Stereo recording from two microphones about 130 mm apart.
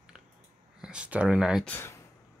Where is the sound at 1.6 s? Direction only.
20° left (ahead or behind).